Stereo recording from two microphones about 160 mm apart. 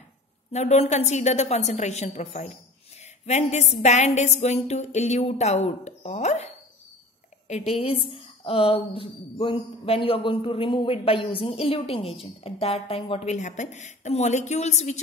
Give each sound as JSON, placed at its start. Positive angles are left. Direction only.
{"t": 0.5, "sound": "a woman's voice", "side_deg": 45}